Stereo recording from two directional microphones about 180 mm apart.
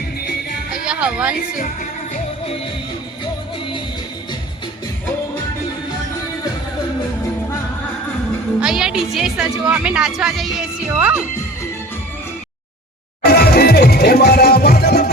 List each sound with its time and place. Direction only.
0.7 s speech: 5° right (ahead or behind)
8.6 s a woman's voice: 5° right (ahead or behind)
13.2 s music: 60° left (ahead or behind)